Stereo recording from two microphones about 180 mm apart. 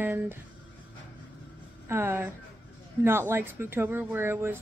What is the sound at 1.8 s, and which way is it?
A woman's voice, 15° right (ahead or behind).